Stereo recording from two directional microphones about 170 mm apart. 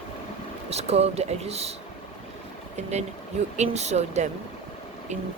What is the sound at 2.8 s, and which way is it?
Speech, 40° right (ahead or behind).